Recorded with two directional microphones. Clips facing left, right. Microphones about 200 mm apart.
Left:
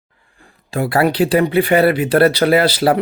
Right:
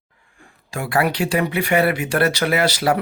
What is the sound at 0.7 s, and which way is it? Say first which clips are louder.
Speech: left 5 dB; 35° left (ahead or behind).